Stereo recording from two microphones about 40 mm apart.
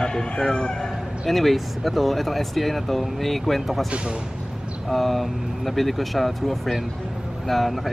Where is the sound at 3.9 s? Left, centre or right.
Right.